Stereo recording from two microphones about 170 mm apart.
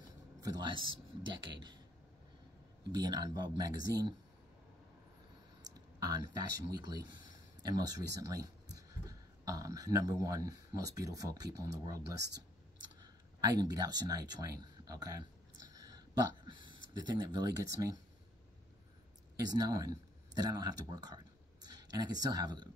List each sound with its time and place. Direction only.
0.4 s speech: 25° right (ahead or behind)
2.9 s speech: 25° right (ahead or behind)
5.9 s speech: 20° right (ahead or behind)
14.6 s a sound: 20° right (ahead or behind)
16.4 s speech: 25° right (ahead or behind)
19.5 s speech: 20° right (ahead or behind)